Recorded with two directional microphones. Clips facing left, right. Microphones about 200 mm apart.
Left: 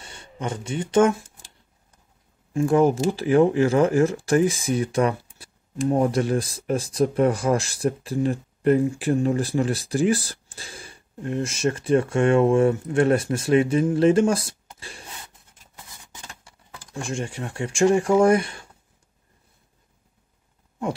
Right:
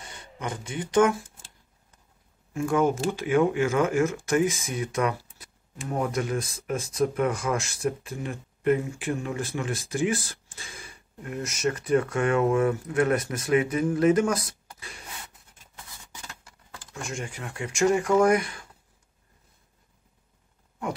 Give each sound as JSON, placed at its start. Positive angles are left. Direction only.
{"t": 0.0, "sound": "speech", "side_deg": 30}
{"t": 2.5, "sound": "speech", "side_deg": 35}
{"t": 16.9, "sound": "speech", "side_deg": 30}